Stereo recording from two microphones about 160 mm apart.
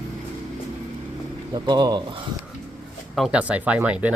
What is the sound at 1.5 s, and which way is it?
Speech, 30° right (ahead or behind).